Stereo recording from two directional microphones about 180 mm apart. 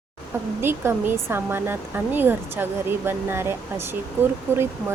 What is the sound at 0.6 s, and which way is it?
Speech, 10° right (ahead or behind).